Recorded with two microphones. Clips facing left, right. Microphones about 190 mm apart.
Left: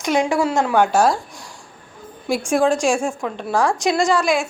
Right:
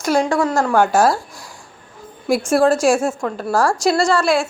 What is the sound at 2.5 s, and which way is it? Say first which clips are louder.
A woman's voice: right 3 dB; 5° right (ahead or behind).